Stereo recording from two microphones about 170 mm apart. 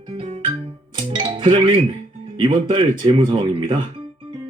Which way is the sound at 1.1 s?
25° right (ahead or behind).